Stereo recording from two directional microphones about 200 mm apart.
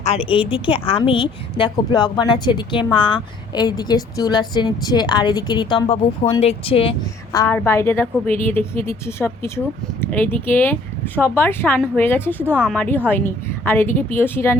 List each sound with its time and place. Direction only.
0.0 s a woman's voice: 30° left (ahead or behind)
7.3 s speech: 10° left (ahead or behind)
12.5 s speech: 5° right (ahead or behind)
12.7 s speech: 5° left (ahead or behind)